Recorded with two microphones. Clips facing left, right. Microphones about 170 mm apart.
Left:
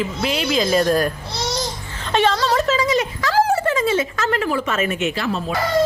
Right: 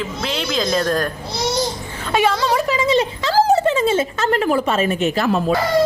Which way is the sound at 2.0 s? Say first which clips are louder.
Even; 10° right (ahead or behind).